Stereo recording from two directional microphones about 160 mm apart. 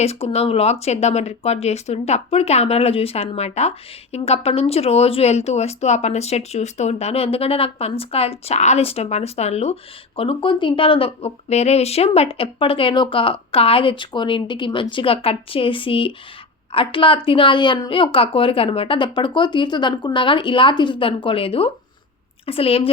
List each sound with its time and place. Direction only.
0.0 s speech: 40° left (ahead or behind)